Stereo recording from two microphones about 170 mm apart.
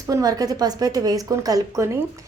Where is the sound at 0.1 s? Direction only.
20° right (ahead or behind).